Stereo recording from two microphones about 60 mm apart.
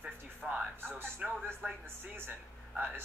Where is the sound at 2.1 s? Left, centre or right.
Right.